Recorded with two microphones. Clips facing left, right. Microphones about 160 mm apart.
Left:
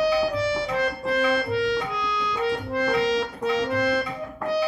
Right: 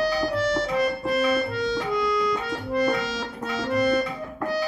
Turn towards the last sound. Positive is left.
turn(degrees=0)  # may be behind; listen again after turning